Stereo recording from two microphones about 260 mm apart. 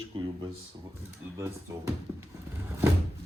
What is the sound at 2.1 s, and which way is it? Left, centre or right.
Speech, centre.